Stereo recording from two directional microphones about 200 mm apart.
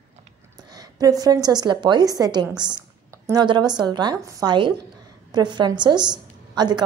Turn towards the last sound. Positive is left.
turn(degrees=-20)  # may be behind; listen again after turning